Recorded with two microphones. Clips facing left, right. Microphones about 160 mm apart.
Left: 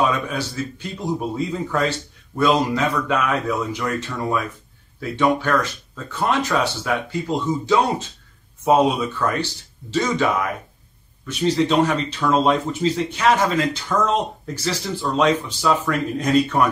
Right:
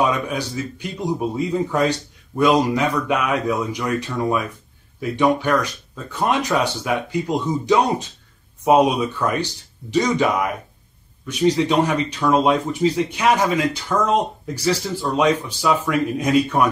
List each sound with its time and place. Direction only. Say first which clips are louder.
0.1 s a man's voice: right 1 dB; 15° right (ahead or behind)
11.2 s speech: right 1 dB; 15° right (ahead or behind)